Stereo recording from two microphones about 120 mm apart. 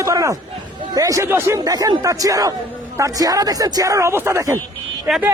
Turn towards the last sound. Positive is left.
turn(degrees=-15)  # may be behind; listen again after turning